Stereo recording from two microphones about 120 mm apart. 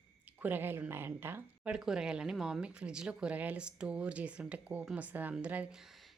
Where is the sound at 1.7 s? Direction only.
5° right (ahead or behind).